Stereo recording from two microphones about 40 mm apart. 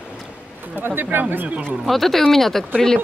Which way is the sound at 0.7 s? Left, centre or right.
Right.